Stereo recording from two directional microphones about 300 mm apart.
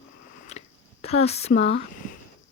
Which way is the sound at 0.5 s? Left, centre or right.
Left.